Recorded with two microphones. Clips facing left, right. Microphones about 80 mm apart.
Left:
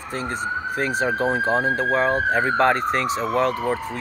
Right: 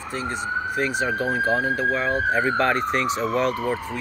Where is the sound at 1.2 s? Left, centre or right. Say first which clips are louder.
Left 1 dB; left.